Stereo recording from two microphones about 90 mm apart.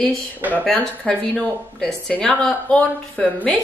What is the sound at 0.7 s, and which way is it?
A woman's voice, 5° left (ahead or behind).